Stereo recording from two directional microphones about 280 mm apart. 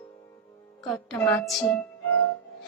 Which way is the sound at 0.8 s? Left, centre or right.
Centre.